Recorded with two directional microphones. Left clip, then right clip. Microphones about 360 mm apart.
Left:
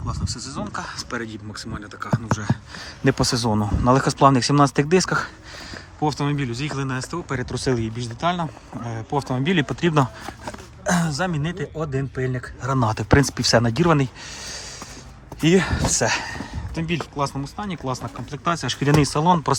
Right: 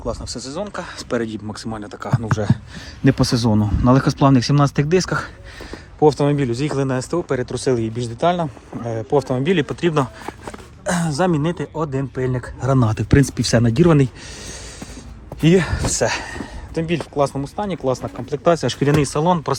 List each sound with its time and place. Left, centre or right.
0.0 s speech: centre
3.2 s speech: centre
10.8 s a sound: centre
11.1 s speech: centre
12.8 s speech: centre